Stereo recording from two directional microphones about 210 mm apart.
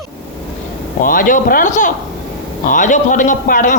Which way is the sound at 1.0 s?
40° left (ahead or behind).